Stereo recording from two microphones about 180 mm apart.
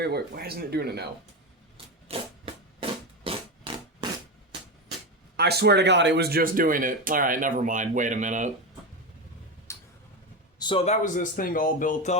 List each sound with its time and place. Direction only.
0.0 s speech: 60° right (ahead or behind)
2.0 s a sound: 30° right (ahead or behind)
5.4 s speech: 65° right (ahead or behind); by 8.4 s 45° right (ahead or behind)
9.7 s tick-tock: 15° left (ahead or behind)
10.6 s speech: 30° left (ahead or behind); by 12.1 s 45° left (ahead or behind)